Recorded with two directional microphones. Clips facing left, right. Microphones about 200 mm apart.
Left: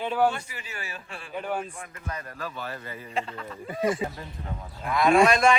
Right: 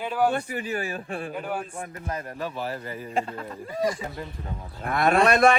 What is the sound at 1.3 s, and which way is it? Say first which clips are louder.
Speech: left 4 dB; 5° right (ahead or behind).